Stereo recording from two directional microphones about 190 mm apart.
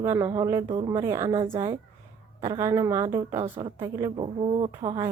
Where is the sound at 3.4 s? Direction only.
25° right (ahead or behind).